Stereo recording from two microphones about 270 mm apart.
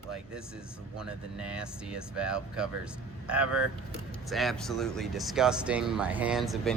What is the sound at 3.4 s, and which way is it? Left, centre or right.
Speech, right.